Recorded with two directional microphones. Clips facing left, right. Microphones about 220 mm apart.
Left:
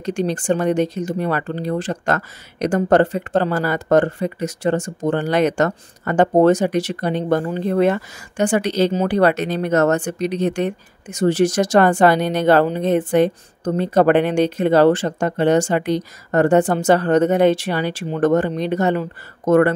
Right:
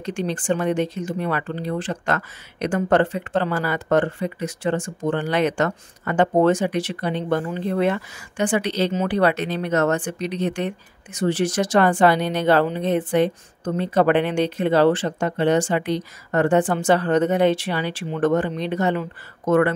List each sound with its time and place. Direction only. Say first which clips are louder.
0.0 s speech: left 4 dB; 40° left (ahead or behind)